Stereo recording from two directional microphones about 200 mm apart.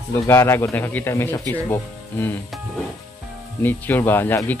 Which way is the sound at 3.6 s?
10° left (ahead or behind).